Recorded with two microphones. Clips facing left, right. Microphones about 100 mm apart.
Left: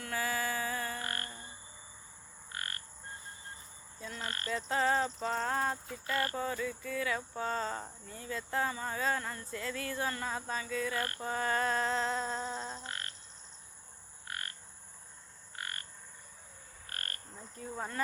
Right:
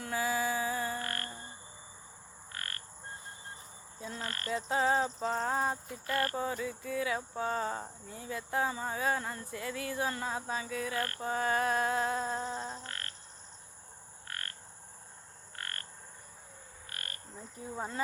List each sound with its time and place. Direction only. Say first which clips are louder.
0.0 s a sound: right 3 dB; 15° right (ahead or behind)
1.0 s a sound: right 1 dB; 20° left (ahead or behind)
2.5 s frog: left 1 dB; 20° left (ahead or behind)
4.5 s speech: right 1 dB; 10° right (ahead or behind)
12.8 s frog: left 1 dB; 20° left (ahead or behind)
14.3 s frog: left 1 dB; 15° left (ahead or behind)
15.5 s frog: left 1 dB; 15° left (ahead or behind)
16.9 s frog: left 2 dB; 45° left (ahead or behind)
17.3 s speech: right 2 dB; 15° right (ahead or behind)